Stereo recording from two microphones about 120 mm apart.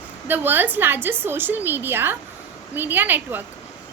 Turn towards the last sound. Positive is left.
turn(degrees=-15)  # may be behind; listen again after turning